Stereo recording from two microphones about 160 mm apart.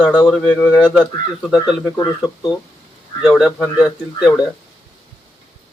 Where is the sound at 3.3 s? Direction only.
Centre (ahead or behind).